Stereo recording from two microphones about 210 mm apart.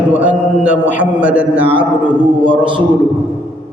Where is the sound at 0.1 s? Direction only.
5° right (ahead or behind).